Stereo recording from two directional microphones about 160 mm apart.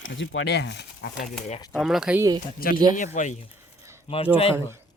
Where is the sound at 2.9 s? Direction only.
50° left (ahead or behind).